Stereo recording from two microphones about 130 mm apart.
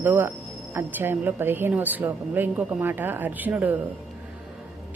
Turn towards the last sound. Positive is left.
turn(degrees=-15)  # may be behind; listen again after turning